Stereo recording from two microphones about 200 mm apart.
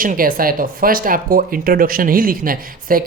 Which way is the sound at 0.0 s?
45° right (ahead or behind).